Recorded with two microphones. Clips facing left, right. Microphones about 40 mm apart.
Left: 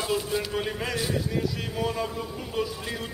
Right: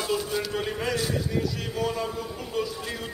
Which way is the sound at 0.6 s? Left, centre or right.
Centre.